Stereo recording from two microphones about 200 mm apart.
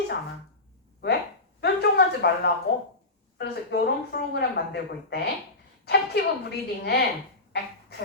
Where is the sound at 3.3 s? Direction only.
55° left (ahead or behind).